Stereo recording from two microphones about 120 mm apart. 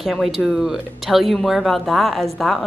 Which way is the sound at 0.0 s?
Centre (ahead or behind).